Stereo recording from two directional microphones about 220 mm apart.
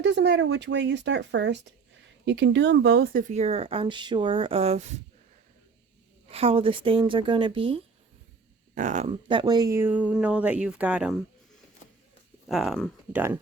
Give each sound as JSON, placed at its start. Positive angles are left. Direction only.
{"t": 0.0, "sound": "speech", "side_deg": -55}
{"t": 6.2, "sound": "speech", "side_deg": -25}
{"t": 8.7, "sound": "speech", "side_deg": -35}
{"t": 12.5, "sound": "speech", "side_deg": 0}